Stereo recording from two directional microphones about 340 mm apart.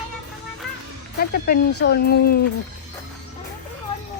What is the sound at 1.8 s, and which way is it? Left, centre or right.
Speech, left.